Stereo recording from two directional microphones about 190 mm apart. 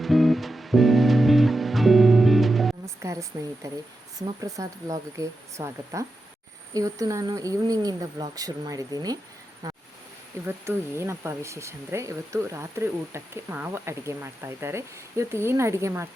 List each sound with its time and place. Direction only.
0.0 s music: centre (ahead or behind)
2.8 s speech: 15° right (ahead or behind)
9.6 s a sound: 20° right (ahead or behind)
10.4 s speech: 15° right (ahead or behind)